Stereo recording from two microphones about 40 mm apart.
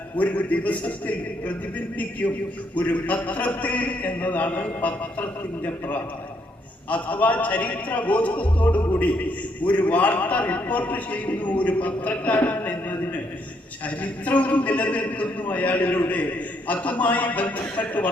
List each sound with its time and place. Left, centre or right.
0.2 s a man's voice: left
12.5 s a sound: left
13.8 s a man's voice: left